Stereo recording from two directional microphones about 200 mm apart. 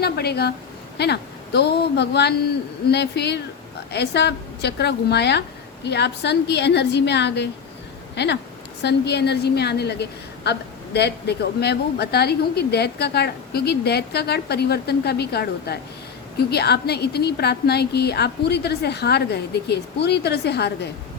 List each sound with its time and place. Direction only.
0.0 s a woman's voice: 55° left (ahead or behind)